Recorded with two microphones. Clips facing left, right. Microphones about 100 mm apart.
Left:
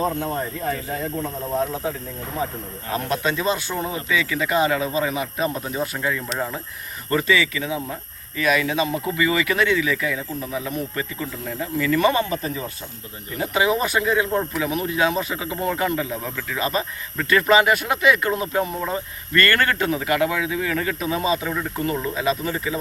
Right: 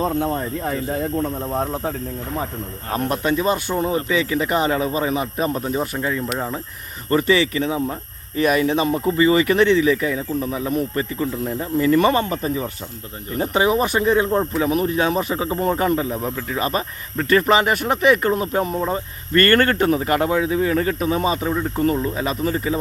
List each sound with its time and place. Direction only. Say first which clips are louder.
2.9 s speech: right 2 dB; 45° right (ahead or behind)
3.3 s speech: right 4 dB; 35° right (ahead or behind)
6.0 s speech: right 2 dB; 30° right (ahead or behind)